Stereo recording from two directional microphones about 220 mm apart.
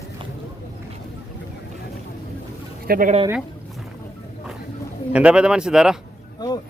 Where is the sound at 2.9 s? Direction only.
35° right (ahead or behind).